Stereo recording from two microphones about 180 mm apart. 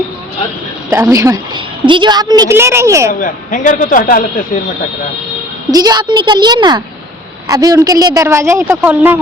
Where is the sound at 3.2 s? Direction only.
45° left (ahead or behind).